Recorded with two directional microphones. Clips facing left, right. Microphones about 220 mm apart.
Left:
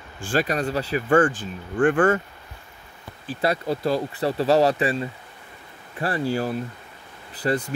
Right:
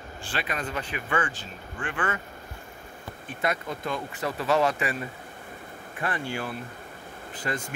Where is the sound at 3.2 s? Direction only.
30° left (ahead or behind).